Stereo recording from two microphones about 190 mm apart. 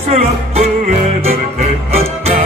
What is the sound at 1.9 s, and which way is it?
Music, 30° right (ahead or behind).